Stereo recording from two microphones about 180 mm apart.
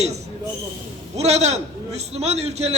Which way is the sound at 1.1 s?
35° right (ahead or behind).